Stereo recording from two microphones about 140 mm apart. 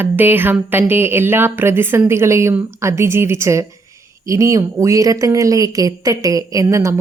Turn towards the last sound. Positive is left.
turn(degrees=-25)  # may be behind; listen again after turning